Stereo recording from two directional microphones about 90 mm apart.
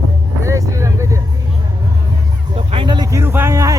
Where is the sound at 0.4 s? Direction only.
35° right (ahead or behind).